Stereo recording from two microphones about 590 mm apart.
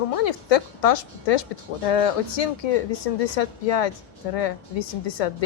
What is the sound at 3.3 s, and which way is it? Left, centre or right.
A woman's voice, left.